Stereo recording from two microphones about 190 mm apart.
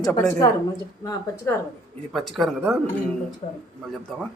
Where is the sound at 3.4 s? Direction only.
35° left (ahead or behind).